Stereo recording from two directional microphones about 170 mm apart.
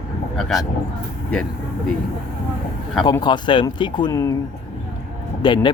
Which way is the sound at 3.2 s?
25° left (ahead or behind).